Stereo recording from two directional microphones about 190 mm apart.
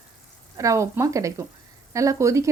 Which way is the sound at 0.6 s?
15° right (ahead or behind).